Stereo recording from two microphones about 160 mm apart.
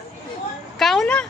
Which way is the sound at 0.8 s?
Centre (ahead or behind).